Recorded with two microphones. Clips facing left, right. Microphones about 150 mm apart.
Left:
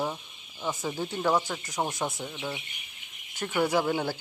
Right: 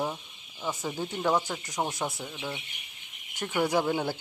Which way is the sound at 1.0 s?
15° right (ahead or behind).